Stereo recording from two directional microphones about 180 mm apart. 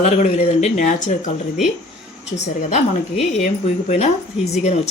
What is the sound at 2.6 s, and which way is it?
Speech, 40° left (ahead or behind).